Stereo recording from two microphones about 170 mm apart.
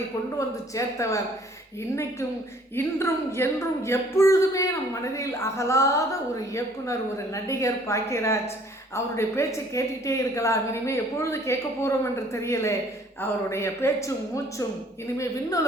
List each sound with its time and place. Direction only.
0.3 s a woman's voice: 20° left (ahead or behind)
2.7 s a woman's voice: 15° left (ahead or behind)